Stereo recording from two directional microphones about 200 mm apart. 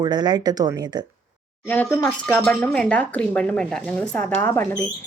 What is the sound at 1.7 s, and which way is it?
Speech, 5° left (ahead or behind).